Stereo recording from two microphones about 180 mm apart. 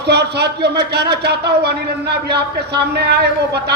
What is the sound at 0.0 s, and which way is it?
A man's voice, 65° right (ahead or behind).